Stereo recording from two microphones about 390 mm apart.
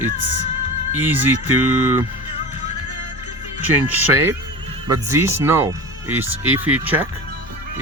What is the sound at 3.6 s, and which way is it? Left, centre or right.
Speech, centre.